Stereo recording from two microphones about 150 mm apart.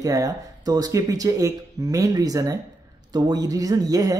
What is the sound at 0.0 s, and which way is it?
Speech, 20° right (ahead or behind).